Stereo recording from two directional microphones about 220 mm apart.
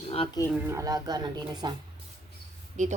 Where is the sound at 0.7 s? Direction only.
15° right (ahead or behind).